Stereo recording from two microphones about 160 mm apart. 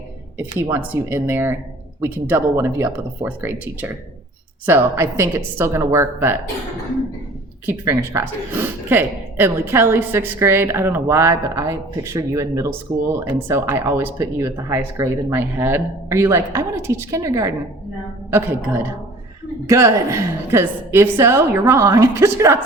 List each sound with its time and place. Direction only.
0.9 s speech: 15° right (ahead or behind)
7.7 s speech: 15° right (ahead or behind)